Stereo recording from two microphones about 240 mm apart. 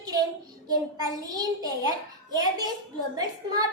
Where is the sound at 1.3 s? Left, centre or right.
Centre.